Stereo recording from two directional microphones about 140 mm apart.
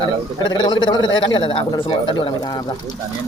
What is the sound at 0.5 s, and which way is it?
A man's voice, 30° left (ahead or behind).